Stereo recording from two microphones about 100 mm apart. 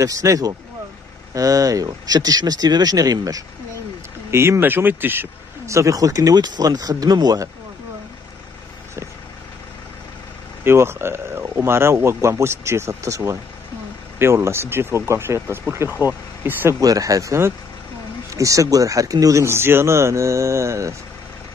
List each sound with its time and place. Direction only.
0.0 s speech: 35° right (ahead or behind)
4.3 s speech: 25° right (ahead or behind); by 7.4 s 40° right (ahead or behind)
10.6 s speech: 25° right (ahead or behind)
16.8 s speech: 35° right (ahead or behind)